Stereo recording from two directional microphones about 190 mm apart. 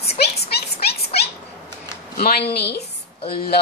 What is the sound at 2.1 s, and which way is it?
Speech, 55° left (ahead or behind).